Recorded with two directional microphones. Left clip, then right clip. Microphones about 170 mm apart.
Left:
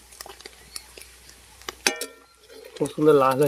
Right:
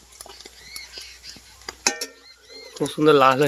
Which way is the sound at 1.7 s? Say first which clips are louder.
Right 1 dB; 45° left (ahead or behind).